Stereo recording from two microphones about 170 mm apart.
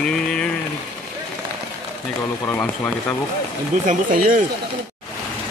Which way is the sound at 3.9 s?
50° right (ahead or behind).